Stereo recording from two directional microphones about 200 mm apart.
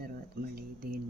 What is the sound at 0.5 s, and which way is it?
Speech, 50° right (ahead or behind).